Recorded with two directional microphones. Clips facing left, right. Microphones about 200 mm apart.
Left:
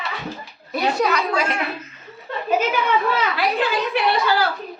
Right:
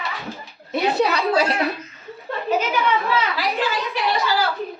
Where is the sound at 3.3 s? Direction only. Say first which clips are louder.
Left 2 dB; 60° left (ahead or behind).